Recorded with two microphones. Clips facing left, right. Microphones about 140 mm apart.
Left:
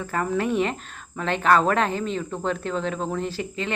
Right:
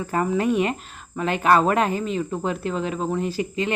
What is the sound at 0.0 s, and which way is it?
Speech, 15° right (ahead or behind).